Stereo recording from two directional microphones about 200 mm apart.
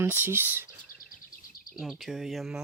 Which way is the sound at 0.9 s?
45° left (ahead or behind).